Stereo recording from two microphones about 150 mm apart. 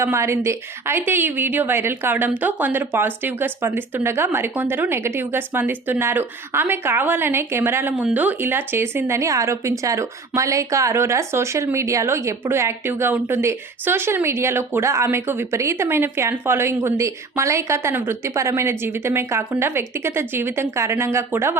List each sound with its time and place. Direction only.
0.0 s a woman's voice: 20° right (ahead or behind)